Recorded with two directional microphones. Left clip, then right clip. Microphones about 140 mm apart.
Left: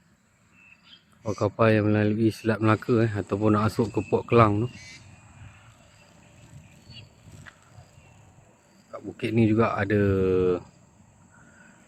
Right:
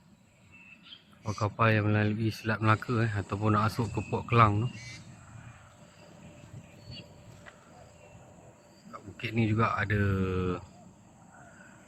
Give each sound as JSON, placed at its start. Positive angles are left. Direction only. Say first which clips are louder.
{"t": 1.4, "sound": "speech", "louder": "left 5 dB", "side_deg": 25}
{"t": 8.9, "sound": "speech", "louder": "left 8 dB", "side_deg": 25}